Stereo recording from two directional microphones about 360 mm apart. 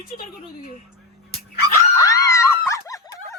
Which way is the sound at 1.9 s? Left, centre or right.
Centre.